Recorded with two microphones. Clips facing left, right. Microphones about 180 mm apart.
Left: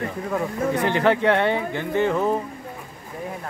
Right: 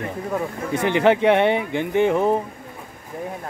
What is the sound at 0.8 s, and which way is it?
Speech, 20° right (ahead or behind).